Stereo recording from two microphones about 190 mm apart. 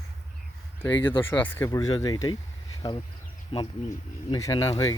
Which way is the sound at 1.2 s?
10° left (ahead or behind).